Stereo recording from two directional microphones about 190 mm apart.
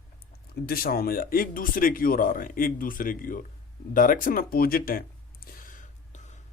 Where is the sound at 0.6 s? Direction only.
50° left (ahead or behind).